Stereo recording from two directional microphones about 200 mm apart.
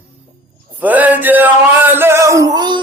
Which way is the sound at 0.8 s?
10° right (ahead or behind).